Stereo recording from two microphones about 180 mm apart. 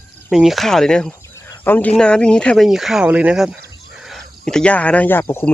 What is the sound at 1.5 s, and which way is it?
Cricket, 10° left (ahead or behind).